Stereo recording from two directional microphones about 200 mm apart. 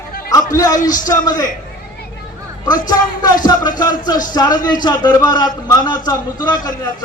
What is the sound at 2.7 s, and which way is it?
Speech, 20° left (ahead or behind).